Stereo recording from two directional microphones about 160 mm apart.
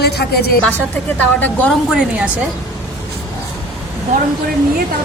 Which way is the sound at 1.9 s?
5° right (ahead or behind).